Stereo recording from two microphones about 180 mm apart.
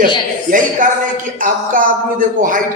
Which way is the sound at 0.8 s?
50° right (ahead or behind).